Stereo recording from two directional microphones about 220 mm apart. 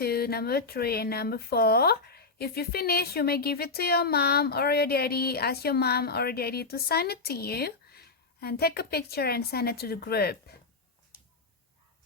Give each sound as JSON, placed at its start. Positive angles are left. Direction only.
{"t": 0.0, "sound": "speech", "side_deg": 45}